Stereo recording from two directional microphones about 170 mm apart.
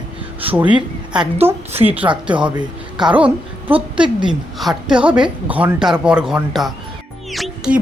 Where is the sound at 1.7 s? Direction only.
35° right (ahead or behind).